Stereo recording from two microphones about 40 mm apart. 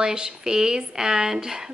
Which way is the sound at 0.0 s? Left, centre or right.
Centre.